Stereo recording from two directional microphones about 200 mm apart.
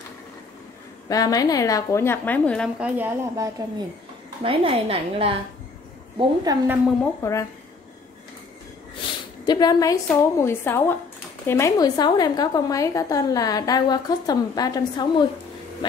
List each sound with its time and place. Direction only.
1.0 s a woman's voice: 20° left (ahead or behind)
2.8 s speech: 10° right (ahead or behind)
4.4 s a woman's voice: 25° right (ahead or behind)
7.2 s a woman's voice: 15° left (ahead or behind)
9.5 s a woman's voice: 20° left (ahead or behind)